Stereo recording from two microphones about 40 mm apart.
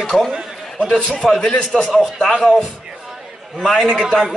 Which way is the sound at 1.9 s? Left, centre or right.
Centre.